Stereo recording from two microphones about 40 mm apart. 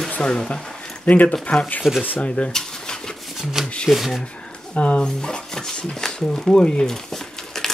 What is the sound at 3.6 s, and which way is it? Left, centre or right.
Speech, centre.